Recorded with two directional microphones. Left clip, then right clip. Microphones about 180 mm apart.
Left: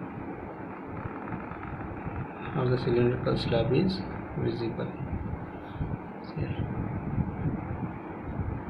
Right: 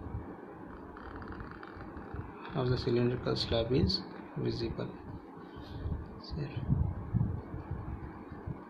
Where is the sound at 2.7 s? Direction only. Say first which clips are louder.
Left 6 dB; 55° right (ahead or behind).